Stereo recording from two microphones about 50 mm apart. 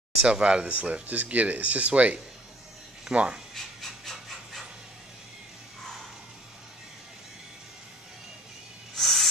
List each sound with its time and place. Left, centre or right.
0.2 s speech: centre
3.5 s wood: centre
8.9 s a sound: centre